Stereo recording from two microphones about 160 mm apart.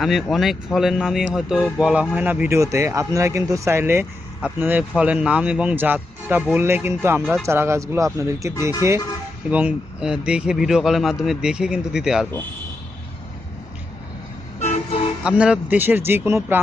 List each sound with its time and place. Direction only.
0.0 s a man's voice: centre (ahead or behind)
15.2 s a man's voice: 5° right (ahead or behind)